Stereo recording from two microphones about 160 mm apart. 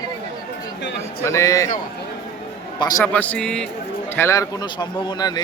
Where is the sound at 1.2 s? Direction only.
20° left (ahead or behind).